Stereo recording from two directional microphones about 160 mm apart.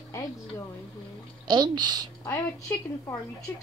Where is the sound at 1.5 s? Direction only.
25° right (ahead or behind).